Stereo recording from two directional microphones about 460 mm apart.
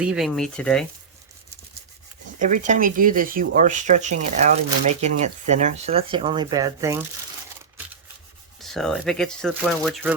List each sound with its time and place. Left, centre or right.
0.0 s speech: centre
2.4 s speech: centre
8.6 s speech: centre